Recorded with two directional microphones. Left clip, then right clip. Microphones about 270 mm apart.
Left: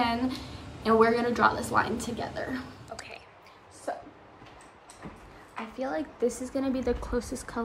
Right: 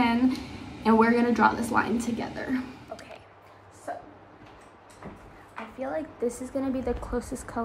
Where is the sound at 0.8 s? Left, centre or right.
Centre.